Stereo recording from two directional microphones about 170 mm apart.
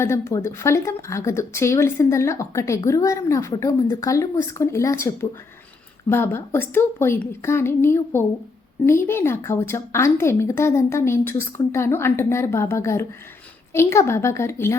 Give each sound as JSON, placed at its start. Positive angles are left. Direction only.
{"t": 0.0, "sound": "speech", "side_deg": 15}